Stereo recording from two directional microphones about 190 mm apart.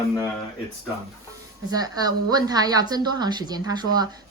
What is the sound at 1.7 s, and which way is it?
A woman's voice, 20° right (ahead or behind).